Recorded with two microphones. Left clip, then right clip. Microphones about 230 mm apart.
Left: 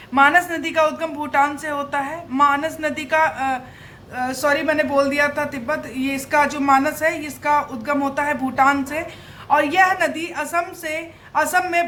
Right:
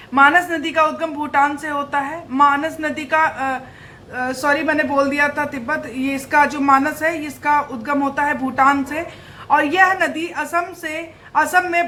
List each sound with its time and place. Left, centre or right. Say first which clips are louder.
0.1 s a man's voice: right 2 dB; left